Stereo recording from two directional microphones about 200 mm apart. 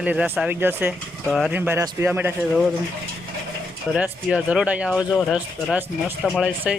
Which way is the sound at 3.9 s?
5° right (ahead or behind).